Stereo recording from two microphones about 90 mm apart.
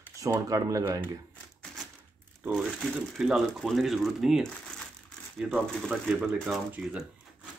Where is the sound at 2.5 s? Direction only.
5° left (ahead or behind).